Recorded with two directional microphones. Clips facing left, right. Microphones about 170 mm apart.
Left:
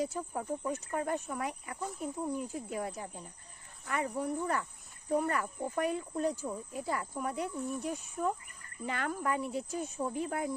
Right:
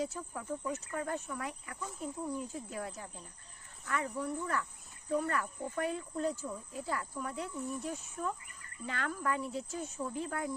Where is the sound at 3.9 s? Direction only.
20° left (ahead or behind).